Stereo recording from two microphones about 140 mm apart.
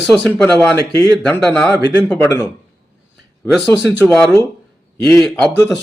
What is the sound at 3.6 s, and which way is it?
Speech, 5° left (ahead or behind).